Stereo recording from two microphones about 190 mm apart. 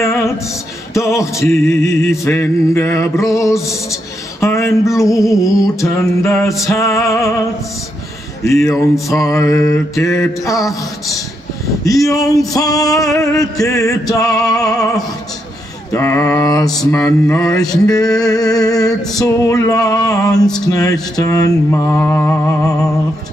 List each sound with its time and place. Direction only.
0.0 s music: 15° left (ahead or behind)
8.5 s music: 15° left (ahead or behind)
10.6 s music: centre (ahead or behind)
11.8 s music: 20° left (ahead or behind)
12.5 s mantra: 20° left (ahead or behind)
13.2 s music: 15° left (ahead or behind)
14.6 s mantra: 20° left (ahead or behind)
20.6 s music: 20° left (ahead or behind)